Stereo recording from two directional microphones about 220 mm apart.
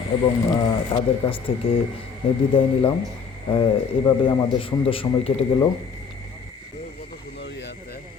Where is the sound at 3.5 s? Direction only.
20° left (ahead or behind).